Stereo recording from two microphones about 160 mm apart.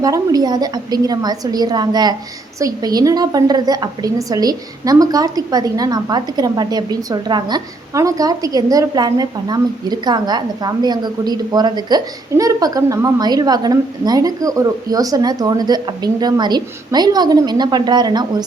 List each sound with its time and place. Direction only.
0.0 s a woman's voice: 20° right (ahead or behind)